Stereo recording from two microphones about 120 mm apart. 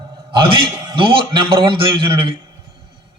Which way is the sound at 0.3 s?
45° right (ahead or behind).